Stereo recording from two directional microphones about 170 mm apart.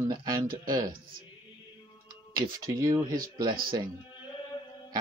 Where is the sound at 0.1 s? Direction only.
25° right (ahead or behind).